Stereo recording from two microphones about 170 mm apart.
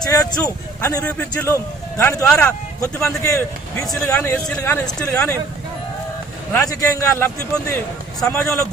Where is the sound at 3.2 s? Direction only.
20° left (ahead or behind).